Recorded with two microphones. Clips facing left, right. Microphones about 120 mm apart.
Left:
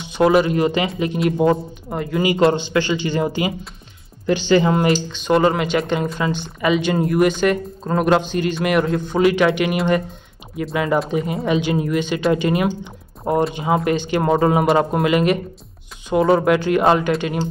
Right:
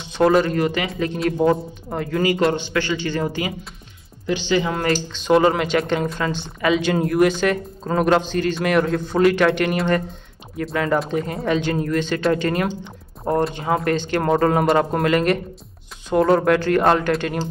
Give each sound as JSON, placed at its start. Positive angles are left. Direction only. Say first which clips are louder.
{"t": 0.0, "sound": "speech", "louder": "left 1 dB", "side_deg": 5}
{"t": 0.6, "sound": "a man's voice", "louder": "left 3 dB", "side_deg": 20}
{"t": 1.0, "sound": "speech", "louder": "left 1 dB", "side_deg": 10}
{"t": 2.2, "sound": "a man's voice", "louder": "left 4 dB", "side_deg": 25}
{"t": 4.3, "sound": "speech", "louder": "left 5 dB", "side_deg": 45}
{"t": 5.1, "sound": "speech", "louder": "right 4 dB", "side_deg": 0}